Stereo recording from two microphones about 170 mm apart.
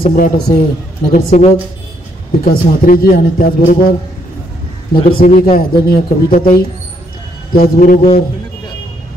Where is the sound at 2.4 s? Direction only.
55° left (ahead or behind).